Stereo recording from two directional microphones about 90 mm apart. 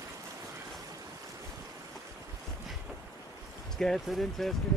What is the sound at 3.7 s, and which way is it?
Speech, 5° left (ahead or behind).